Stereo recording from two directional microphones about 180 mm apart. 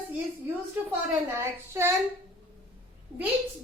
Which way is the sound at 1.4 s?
15° right (ahead or behind).